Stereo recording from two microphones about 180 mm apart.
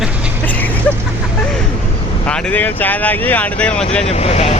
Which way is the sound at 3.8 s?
35° left (ahead or behind).